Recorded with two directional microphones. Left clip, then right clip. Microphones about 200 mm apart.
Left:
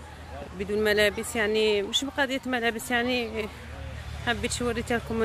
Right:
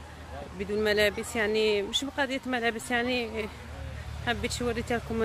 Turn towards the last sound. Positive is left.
turn(degrees=10)  # may be behind; listen again after turning